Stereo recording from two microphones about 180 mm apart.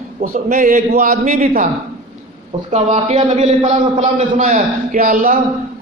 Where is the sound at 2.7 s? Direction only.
40° right (ahead or behind).